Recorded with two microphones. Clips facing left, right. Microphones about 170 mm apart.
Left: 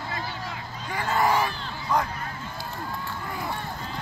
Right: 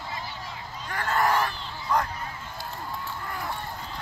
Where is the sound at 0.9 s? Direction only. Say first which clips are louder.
Left 1 dB; 5° left (ahead or behind).